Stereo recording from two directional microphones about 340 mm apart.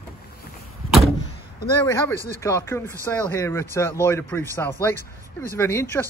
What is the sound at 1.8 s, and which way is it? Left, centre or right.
Speech, centre.